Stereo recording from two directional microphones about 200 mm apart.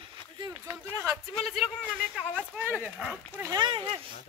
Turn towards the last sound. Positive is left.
turn(degrees=-25)  # may be behind; listen again after turning